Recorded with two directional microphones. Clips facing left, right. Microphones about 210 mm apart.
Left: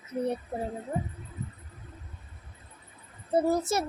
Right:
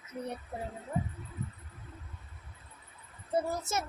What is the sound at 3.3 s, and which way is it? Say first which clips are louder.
Speech: left 7 dB; 35° left (ahead or behind).